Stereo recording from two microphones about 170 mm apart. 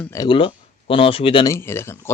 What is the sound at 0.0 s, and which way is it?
Speech, 15° left (ahead or behind).